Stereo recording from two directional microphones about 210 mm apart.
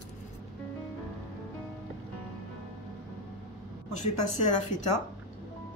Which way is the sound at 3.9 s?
35° left (ahead or behind).